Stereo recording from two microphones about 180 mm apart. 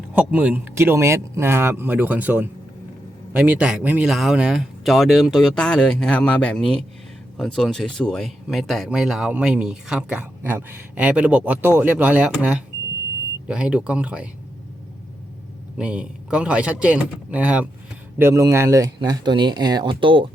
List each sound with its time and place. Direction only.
0.1 s a man's voice: 5° right (ahead or behind)
15.8 s a man's voice: 5° right (ahead or behind); by 20.3 s 30° right (ahead or behind)